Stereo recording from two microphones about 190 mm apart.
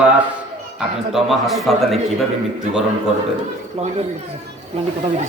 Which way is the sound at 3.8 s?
35° right (ahead or behind).